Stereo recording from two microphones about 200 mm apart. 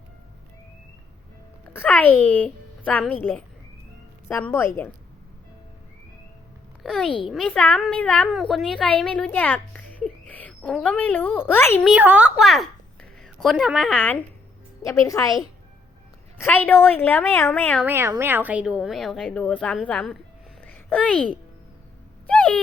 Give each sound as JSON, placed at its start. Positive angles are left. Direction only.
{"t": 1.7, "sound": "a woman's voice", "side_deg": 10}
{"t": 6.8, "sound": "a woman's voice", "side_deg": 0}
{"t": 11.9, "sound": "a woman's voice", "side_deg": -5}
{"t": 16.4, "sound": "a woman's voice", "side_deg": 10}
{"t": 17.8, "sound": "a woman's voice", "side_deg": -10}
{"t": 22.3, "sound": "a sound", "side_deg": 5}